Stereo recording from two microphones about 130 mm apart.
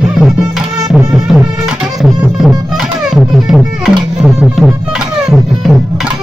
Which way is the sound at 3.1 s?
5° right (ahead or behind).